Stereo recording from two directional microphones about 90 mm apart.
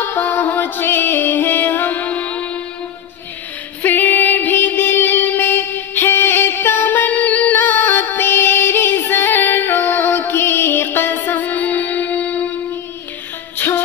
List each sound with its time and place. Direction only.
0.1 s music: 20° left (ahead or behind)
3.8 s music: 20° left (ahead or behind)
13.6 s music: 25° left (ahead or behind)